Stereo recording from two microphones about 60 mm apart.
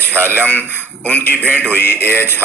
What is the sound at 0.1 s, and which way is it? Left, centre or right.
Speech, right.